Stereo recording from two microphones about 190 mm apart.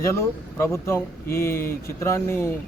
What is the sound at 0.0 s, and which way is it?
Speech, 15° left (ahead or behind).